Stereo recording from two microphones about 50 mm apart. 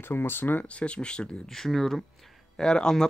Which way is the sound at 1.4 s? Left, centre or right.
Centre.